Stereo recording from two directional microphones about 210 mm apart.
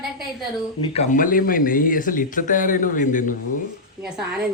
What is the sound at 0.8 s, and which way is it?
Speech, 30° left (ahead or behind).